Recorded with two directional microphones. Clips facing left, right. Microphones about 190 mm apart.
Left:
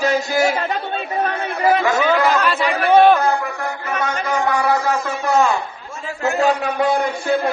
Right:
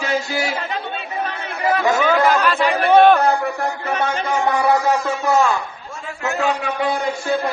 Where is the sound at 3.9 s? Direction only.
30° right (ahead or behind).